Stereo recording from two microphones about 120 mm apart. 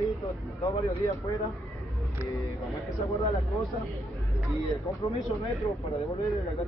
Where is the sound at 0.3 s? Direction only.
25° left (ahead or behind).